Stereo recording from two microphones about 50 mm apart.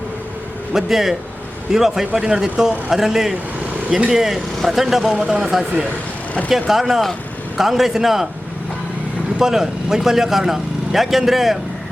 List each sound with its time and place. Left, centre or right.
0.7 s a man's voice: centre
3.8 s speech: right
4.1 s speech: centre
6.5 s speech: centre
9.4 s speech: centre